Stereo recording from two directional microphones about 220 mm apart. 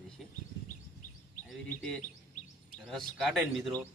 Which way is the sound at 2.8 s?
Centre (ahead or behind).